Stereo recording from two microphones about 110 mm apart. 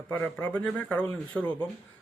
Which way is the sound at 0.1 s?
15° left (ahead or behind).